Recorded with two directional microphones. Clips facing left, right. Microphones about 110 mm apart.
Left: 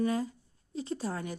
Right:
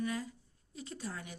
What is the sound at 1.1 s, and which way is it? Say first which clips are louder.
Speech: left 9 dB; 45° left (ahead or behind).